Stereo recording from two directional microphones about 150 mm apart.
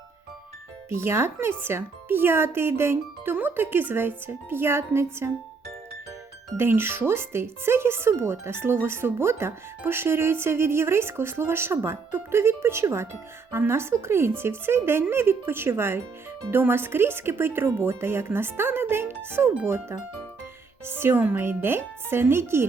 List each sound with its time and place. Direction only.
0.9 s speech: 15° right (ahead or behind)
6.6 s speech: 15° right (ahead or behind)